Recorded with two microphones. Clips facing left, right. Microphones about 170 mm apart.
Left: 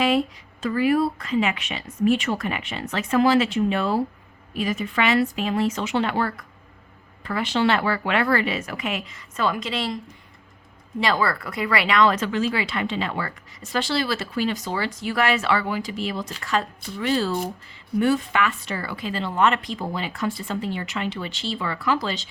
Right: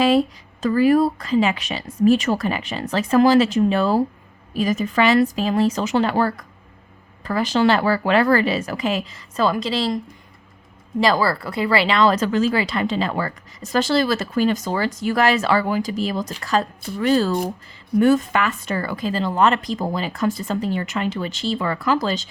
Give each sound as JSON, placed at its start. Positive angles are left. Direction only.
{"t": 0.6, "sound": "speech", "side_deg": -40}
{"t": 11.0, "sound": "a woman's voice", "side_deg": -35}